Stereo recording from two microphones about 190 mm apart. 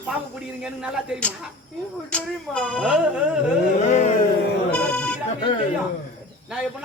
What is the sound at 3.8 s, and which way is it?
Music, 35° left (ahead or behind).